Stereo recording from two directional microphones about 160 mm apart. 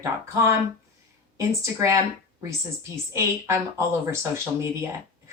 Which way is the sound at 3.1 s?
20° right (ahead or behind).